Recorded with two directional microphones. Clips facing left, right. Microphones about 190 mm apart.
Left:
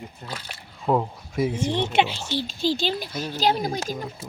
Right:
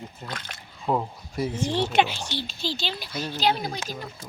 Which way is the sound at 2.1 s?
5° left (ahead or behind).